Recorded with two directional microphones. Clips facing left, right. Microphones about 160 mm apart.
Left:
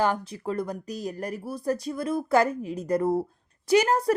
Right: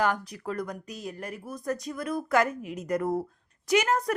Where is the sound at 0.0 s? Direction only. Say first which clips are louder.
Left 2 dB; 30° left (ahead or behind).